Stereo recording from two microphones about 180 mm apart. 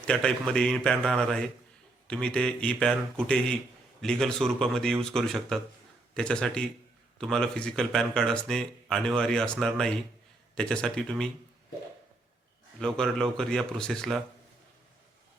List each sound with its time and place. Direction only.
0.1 s speech: 5° left (ahead or behind)
12.8 s speech: 5° left (ahead or behind)